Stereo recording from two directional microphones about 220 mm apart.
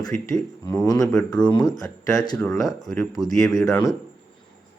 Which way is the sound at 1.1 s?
5° left (ahead or behind).